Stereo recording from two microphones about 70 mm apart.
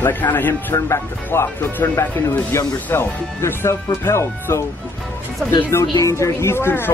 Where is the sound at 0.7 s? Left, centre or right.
Left.